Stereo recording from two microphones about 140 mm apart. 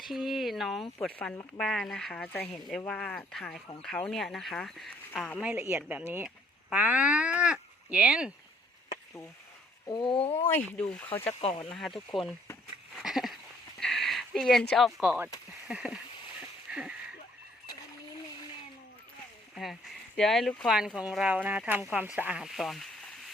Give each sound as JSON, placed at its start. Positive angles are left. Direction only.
{"t": 0.0, "sound": "speech", "side_deg": 0}
{"t": 5.4, "sound": "speech", "side_deg": -15}
{"t": 10.1, "sound": "speech", "side_deg": 45}
{"t": 10.5, "sound": "speech", "side_deg": 10}
{"t": 11.4, "sound": "speech", "side_deg": 35}
{"t": 11.7, "sound": "speech", "side_deg": 0}
{"t": 13.0, "sound": "a sound", "side_deg": 0}
{"t": 15.6, "sound": "speech", "side_deg": -5}
{"t": 16.7, "sound": "a sound", "side_deg": -10}
{"t": 19.5, "sound": "speech", "side_deg": 0}